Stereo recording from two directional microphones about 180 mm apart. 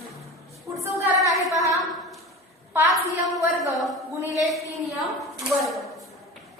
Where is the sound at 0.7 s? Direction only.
15° right (ahead or behind).